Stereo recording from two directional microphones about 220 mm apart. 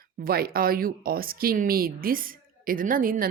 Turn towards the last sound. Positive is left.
turn(degrees=-40)  # may be behind; listen again after turning